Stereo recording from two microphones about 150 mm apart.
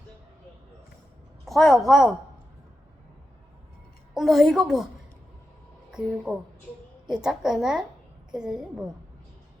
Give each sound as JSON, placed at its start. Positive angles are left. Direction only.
{"t": 1.5, "sound": "a woman's voice", "side_deg": 0}
{"t": 4.1, "sound": "a woman's voice", "side_deg": 0}
{"t": 5.9, "sound": "a woman's voice", "side_deg": -5}